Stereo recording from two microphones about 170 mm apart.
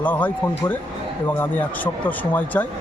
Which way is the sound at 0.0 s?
10° left (ahead or behind).